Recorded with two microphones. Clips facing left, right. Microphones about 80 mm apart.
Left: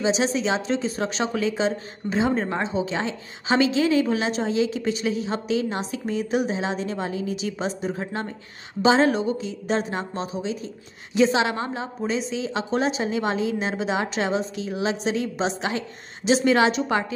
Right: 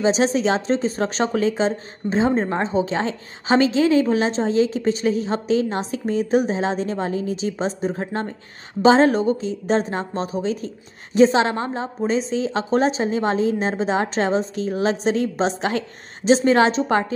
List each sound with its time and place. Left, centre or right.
0.0 s a woman's voice: right